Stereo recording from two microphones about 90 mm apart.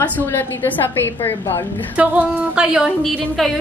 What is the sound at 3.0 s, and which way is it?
Speech, centre (ahead or behind).